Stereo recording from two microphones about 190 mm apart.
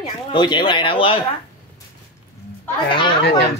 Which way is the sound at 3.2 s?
60° left (ahead or behind).